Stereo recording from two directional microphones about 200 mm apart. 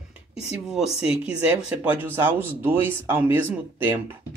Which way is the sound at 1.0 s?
30° left (ahead or behind).